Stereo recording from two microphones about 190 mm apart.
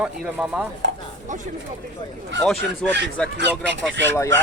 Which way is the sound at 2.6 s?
65° right (ahead or behind).